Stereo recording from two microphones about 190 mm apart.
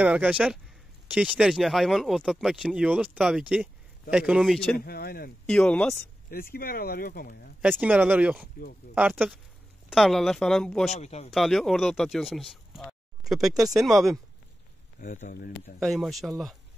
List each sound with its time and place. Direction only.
0.0 s speech: 5° right (ahead or behind)
4.7 s speech: 55° left (ahead or behind)
5.5 s speech: 5° left (ahead or behind)
6.3 s speech: 50° left (ahead or behind)
7.8 s speech: 10° right (ahead or behind)
10.9 s speech: 35° left (ahead or behind)
11.3 s speech: centre (ahead or behind)
15.0 s speech: 40° left (ahead or behind)
15.8 s speech: centre (ahead or behind)